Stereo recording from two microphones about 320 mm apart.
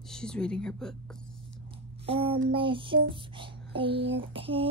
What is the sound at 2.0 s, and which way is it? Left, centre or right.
Child singing, centre.